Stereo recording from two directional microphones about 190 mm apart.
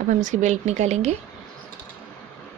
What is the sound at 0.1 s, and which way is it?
Speech, 40° right (ahead or behind).